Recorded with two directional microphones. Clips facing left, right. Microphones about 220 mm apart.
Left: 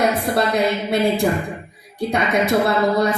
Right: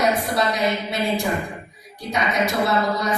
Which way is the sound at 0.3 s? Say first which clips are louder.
Left 3 dB; 55° left (ahead or behind).